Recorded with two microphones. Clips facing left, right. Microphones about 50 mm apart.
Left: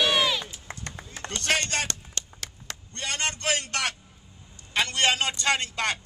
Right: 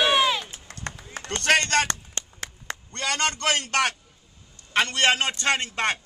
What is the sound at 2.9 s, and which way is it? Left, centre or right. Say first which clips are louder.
A man's voice: right 4 dB; right.